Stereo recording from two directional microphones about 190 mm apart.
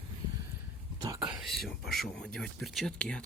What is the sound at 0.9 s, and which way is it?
Speech, 20° right (ahead or behind).